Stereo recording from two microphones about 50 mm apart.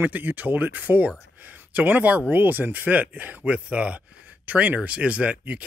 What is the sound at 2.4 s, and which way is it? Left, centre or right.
Speech, right.